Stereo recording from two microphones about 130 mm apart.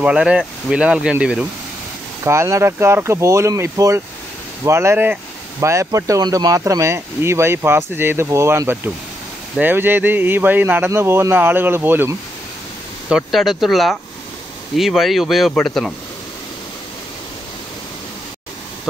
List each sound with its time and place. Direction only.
0.0 s speech: 10° right (ahead or behind)
2.2 s speech: 20° right (ahead or behind)
13.1 s speech: centre (ahead or behind)